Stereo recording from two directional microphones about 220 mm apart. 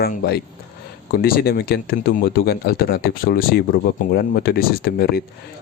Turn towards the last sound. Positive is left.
turn(degrees=45)  # may be behind; listen again after turning